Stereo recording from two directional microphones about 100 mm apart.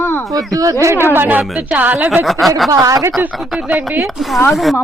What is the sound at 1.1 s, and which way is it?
Speech, 20° right (ahead or behind).